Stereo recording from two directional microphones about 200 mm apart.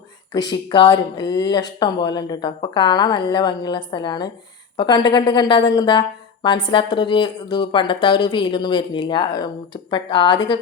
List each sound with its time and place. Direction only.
0.3 s a woman's voice: 20° left (ahead or behind)